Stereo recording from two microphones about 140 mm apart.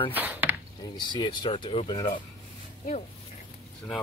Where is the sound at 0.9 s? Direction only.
30° left (ahead or behind).